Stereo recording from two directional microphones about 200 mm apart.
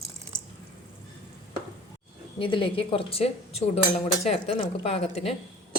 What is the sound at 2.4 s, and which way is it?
A woman's voice, 25° left (ahead or behind).